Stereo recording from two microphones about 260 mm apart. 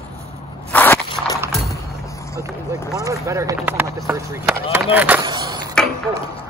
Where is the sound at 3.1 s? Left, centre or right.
Centre.